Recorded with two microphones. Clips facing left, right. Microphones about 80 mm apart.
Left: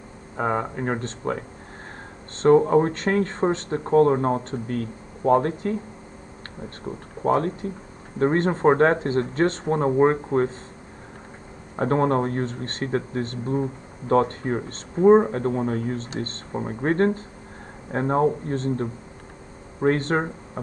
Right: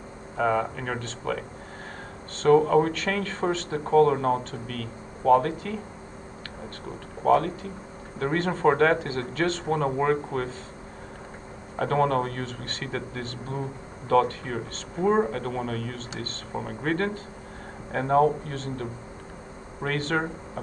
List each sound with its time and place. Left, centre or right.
0.4 s speech: left
2.4 s speech: left
7.2 s speech: left
11.8 s speech: left